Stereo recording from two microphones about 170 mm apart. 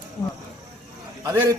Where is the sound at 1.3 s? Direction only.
15° right (ahead or behind).